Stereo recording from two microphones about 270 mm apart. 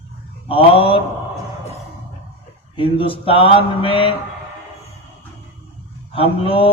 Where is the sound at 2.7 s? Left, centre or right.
Centre.